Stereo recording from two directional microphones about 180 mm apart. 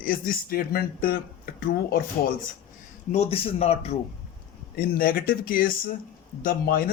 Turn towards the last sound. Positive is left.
turn(degrees=55)  # may be behind; listen again after turning